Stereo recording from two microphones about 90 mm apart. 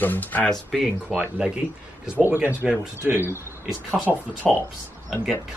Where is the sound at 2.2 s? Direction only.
25° right (ahead or behind).